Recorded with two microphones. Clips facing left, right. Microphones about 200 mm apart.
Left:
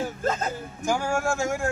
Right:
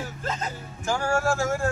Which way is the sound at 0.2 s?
50° left (ahead or behind).